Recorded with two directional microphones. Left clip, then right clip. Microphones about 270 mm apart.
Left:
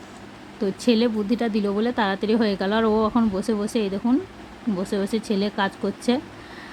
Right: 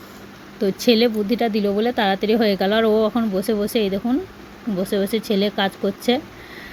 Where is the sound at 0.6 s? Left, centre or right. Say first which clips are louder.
Right 5 dB; centre.